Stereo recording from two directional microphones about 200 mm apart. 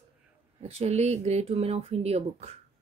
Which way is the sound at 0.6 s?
30° right (ahead or behind).